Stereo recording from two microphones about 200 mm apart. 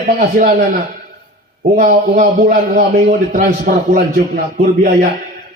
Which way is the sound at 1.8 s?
45° right (ahead or behind).